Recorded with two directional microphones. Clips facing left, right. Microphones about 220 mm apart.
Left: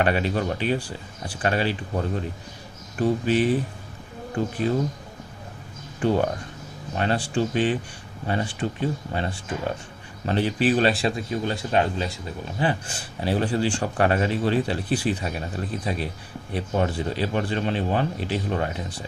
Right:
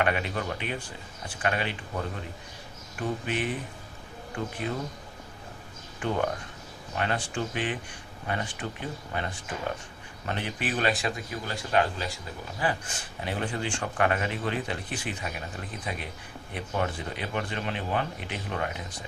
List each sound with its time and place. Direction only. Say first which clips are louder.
0.0 s speech: left 5 dB; 35° left (ahead or behind)
6.0 s speech: left 6 dB; 35° left (ahead or behind)
16.5 s speech: left 6 dB; 35° left (ahead or behind)